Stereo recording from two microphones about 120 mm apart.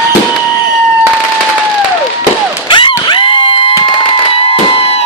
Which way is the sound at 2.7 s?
45° left (ahead or behind).